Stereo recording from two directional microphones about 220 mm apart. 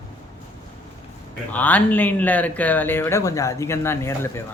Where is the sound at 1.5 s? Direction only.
5° left (ahead or behind).